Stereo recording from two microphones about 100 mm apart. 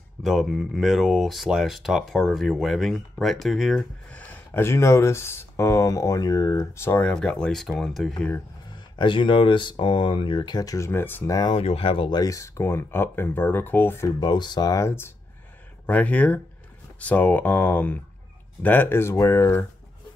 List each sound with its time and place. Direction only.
0.2 s speech: centre (ahead or behind)
4.1 s a sound: 15° left (ahead or behind)
4.6 s speech: 30° left (ahead or behind)
7.0 s speech: 10° left (ahead or behind)
8.7 s speech: 50° left (ahead or behind)
10.9 s speech: 20° left (ahead or behind)
11.2 s speech: 40° left (ahead or behind)
11.5 s speech: 75° left (ahead or behind)
12.1 s speech: 35° left (ahead or behind); by 14.0 s 20° left (ahead or behind)
14.0 s speech: 45° left (ahead or behind); by 15.1 s 25° left (ahead or behind)
15.9 s speech: 15° left (ahead or behind)